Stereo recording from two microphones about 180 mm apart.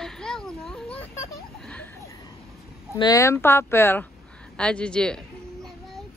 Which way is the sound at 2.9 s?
20° left (ahead or behind).